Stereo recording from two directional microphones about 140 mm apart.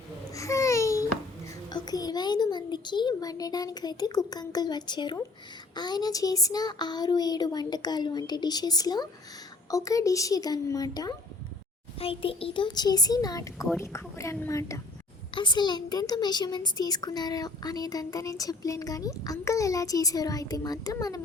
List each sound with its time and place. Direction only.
0.3 s babbling: 20° left (ahead or behind)
1.7 s a sound: 30° left (ahead or behind)
4.3 s a woman's voice: 30° left (ahead or behind)
11.9 s a woman's voice: 40° left (ahead or behind); by 14.8 s 20° left (ahead or behind)
15.4 s a woman's voice: 30° left (ahead or behind)